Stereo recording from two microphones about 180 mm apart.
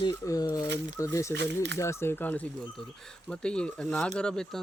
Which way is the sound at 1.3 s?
75° right (ahead or behind).